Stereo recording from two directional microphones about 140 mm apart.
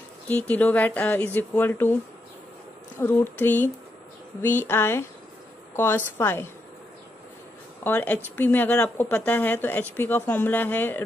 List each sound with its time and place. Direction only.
0.3 s speech: 10° left (ahead or behind)
3.0 s speech: 15° left (ahead or behind)
7.8 s speech: 15° left (ahead or behind)